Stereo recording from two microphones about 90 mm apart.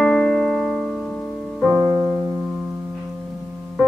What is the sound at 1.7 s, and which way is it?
Music, 25° right (ahead or behind).